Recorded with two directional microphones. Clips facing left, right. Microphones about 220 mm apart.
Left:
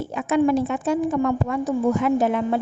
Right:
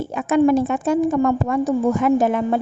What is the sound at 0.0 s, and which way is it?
A woman's voice, 50° right (ahead or behind).